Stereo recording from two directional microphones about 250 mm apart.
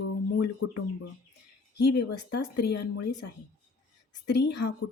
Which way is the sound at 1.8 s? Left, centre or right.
Left.